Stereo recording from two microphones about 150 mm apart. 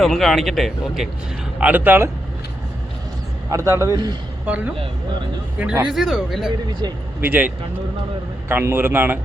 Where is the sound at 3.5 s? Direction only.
20° right (ahead or behind).